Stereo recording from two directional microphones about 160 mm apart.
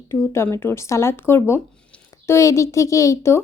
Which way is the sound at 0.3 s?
15° left (ahead or behind).